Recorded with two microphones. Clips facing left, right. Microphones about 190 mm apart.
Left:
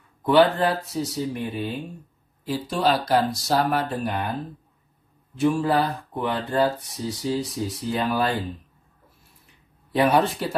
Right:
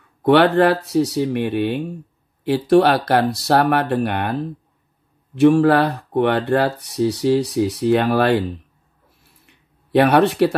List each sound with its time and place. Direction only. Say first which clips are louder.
0.2 s speech: right 5 dB; 70° right (ahead or behind)
9.9 s speech: right 6 dB; 75° right (ahead or behind)